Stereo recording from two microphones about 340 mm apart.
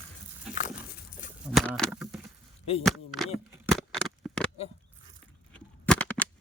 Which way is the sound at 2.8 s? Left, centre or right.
Centre.